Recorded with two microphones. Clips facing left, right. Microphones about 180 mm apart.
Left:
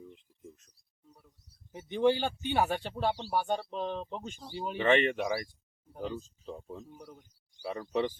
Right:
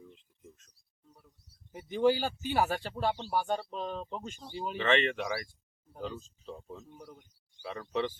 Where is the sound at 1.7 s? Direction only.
5° right (ahead or behind).